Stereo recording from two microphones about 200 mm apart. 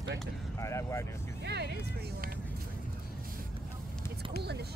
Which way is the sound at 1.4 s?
55° right (ahead or behind).